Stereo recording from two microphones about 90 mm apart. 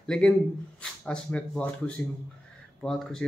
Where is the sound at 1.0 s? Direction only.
15° left (ahead or behind).